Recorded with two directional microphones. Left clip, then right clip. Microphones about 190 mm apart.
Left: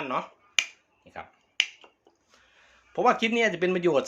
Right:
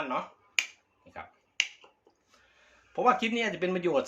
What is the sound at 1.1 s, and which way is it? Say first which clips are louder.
Speech: left 3 dB; 25° left (ahead or behind).